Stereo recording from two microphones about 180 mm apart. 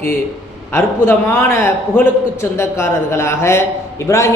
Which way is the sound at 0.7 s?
15° left (ahead or behind).